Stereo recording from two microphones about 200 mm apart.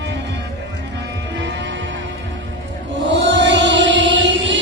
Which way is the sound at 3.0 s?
65° right (ahead or behind).